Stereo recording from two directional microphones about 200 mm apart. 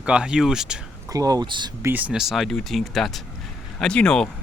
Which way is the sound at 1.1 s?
20° right (ahead or behind).